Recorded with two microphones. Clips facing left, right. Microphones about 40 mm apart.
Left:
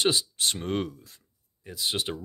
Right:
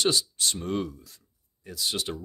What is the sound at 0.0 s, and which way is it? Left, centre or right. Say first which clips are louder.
Speech: even; left.